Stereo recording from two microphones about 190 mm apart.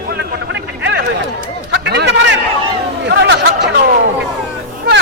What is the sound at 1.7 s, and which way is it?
Chatter, 65° right (ahead or behind).